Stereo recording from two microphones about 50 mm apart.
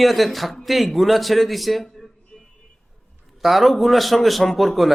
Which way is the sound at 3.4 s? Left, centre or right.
Centre.